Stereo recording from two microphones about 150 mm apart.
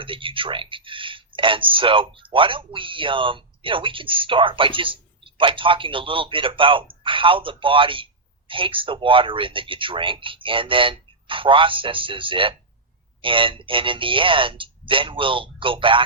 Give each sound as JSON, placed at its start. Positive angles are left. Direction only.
{"t": 0.0, "sound": "speech", "side_deg": -35}